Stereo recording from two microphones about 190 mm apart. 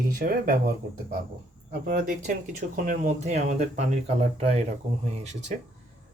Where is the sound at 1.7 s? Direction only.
55° right (ahead or behind).